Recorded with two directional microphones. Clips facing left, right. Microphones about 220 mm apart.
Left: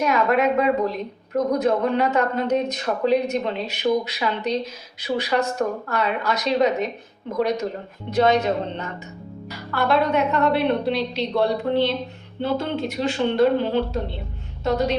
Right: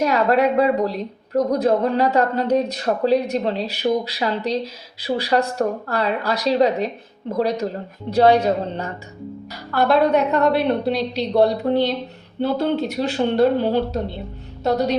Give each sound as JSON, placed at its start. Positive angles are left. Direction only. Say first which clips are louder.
{"t": 0.0, "sound": "a woman's voice", "louder": "right 2 dB", "side_deg": -35}
{"t": 14.6, "sound": "music", "louder": "right 2 dB", "side_deg": -40}